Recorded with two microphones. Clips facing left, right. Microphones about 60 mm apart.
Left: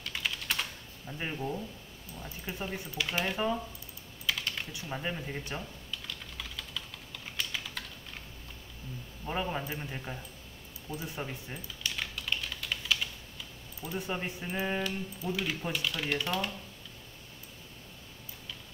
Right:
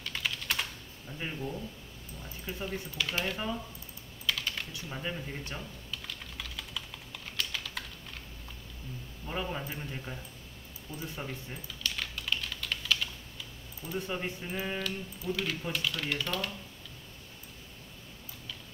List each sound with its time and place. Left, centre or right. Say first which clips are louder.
0.1 s typing: even; centre
1.1 s speech: left 2 dB; centre
4.3 s typing: even; centre
4.7 s speech: left 1 dB; centre
5.9 s typing: even; centre
7.2 s typing: even; centre
9.2 s speech: left 2 dB; centre
11.4 s a sound: even; centre
12.2 s typing: right 2 dB; centre
13.8 s speech: even; centre